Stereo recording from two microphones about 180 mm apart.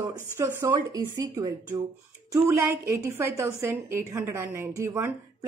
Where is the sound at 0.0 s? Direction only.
15° right (ahead or behind).